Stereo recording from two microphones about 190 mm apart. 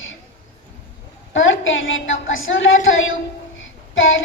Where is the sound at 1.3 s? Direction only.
90° left.